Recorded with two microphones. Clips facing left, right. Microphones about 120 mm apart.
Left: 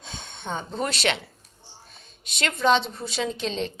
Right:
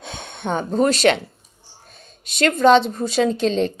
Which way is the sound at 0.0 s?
60° right (ahead or behind).